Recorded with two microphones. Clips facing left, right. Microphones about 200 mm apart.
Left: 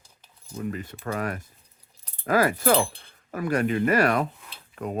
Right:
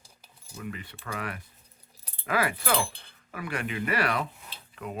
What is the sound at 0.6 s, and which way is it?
Speech, 40° left (ahead or behind).